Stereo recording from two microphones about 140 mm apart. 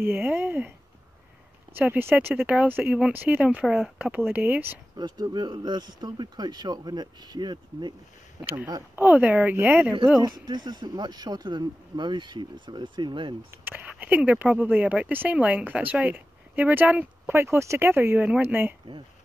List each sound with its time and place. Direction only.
0.0 s speech: 15° right (ahead or behind)
4.9 s speech: 30° right (ahead or behind)
8.4 s speech: 10° right (ahead or behind)
10.2 s speech: 30° right (ahead or behind)
13.5 s speech: 15° right (ahead or behind)